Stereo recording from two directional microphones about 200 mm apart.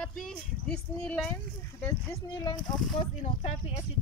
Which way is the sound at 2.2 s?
20° left (ahead or behind).